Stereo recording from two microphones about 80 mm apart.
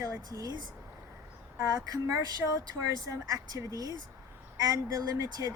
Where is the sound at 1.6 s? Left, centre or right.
Right.